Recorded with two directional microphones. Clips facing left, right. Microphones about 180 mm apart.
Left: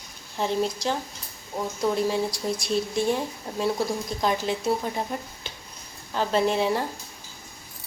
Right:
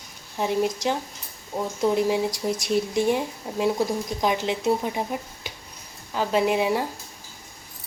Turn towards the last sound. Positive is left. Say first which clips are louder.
# right 1 dB
turn(degrees=-10)  # may be behind; listen again after turning